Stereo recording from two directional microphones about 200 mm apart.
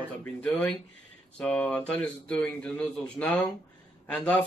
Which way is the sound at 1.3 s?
5° left (ahead or behind).